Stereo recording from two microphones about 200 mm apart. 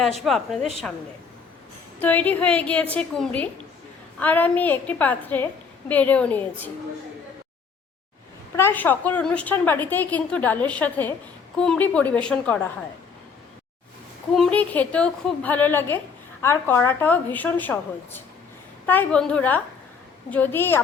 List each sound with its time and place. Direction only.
0.3 s a woman's voice: centre (ahead or behind)
2.0 s a woman's voice: 10° left (ahead or behind)
8.5 s a woman's voice: 10° left (ahead or behind)
14.3 s a woman's voice: 5° left (ahead or behind)